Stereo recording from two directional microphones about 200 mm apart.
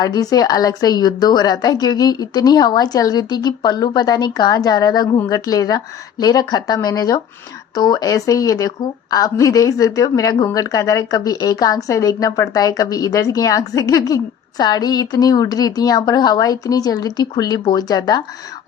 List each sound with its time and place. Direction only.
0.0 s a woman's voice: 20° left (ahead or behind)